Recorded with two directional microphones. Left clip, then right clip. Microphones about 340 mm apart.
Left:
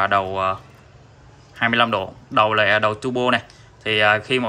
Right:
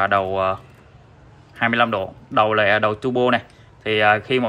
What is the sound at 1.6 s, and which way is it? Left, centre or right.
Speech, centre.